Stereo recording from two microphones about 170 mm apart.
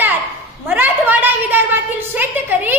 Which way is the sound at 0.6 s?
10° right (ahead or behind).